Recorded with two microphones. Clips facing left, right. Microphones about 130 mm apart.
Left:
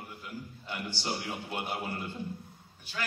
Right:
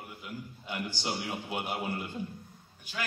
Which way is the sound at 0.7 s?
10° right (ahead or behind).